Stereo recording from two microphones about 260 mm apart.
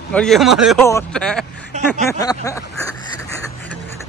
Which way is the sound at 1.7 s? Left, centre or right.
Right.